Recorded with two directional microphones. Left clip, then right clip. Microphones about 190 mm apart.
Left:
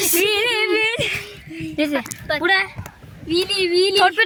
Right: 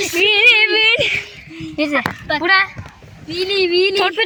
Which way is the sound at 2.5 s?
10° right (ahead or behind).